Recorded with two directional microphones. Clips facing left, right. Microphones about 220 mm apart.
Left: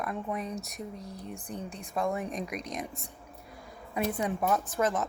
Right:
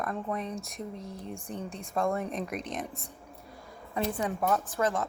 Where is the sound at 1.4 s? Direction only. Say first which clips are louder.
Right 1 dB; 30° right (ahead or behind).